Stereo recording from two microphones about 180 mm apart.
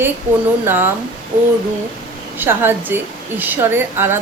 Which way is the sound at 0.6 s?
10° right (ahead or behind).